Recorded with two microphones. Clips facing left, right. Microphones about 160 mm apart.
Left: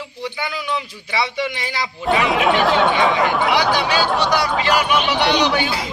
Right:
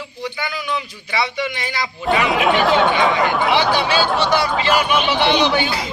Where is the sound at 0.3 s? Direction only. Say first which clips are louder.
Even; 25° left (ahead or behind).